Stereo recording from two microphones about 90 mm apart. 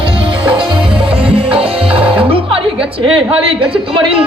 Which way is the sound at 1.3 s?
90° right.